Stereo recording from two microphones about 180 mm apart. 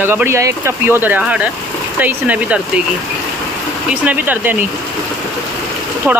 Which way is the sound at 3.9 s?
10° right (ahead or behind).